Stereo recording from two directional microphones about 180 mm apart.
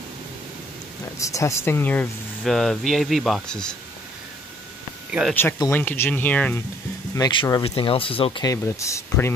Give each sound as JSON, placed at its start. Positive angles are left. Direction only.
{"t": 1.2, "sound": "speech", "side_deg": 15}
{"t": 5.3, "sound": "speech", "side_deg": 10}
{"t": 7.2, "sound": "speech", "side_deg": 20}